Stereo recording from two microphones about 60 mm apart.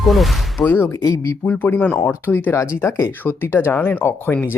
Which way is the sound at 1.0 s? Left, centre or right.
Left.